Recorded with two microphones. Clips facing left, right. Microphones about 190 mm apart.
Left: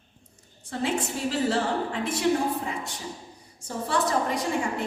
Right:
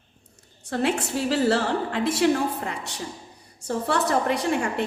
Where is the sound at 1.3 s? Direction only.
70° right (ahead or behind).